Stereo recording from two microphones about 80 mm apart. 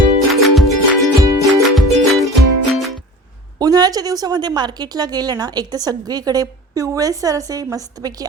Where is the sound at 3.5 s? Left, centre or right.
Right.